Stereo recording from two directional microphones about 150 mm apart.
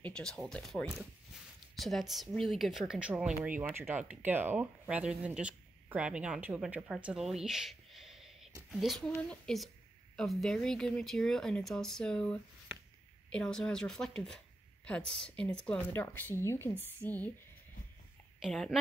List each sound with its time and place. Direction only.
0.0 s a woman's voice: 5° left (ahead or behind)
18.4 s speech: centre (ahead or behind)